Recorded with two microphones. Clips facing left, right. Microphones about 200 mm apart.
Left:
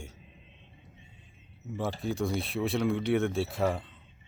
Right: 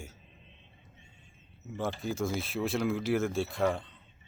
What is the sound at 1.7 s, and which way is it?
Speech, centre (ahead or behind).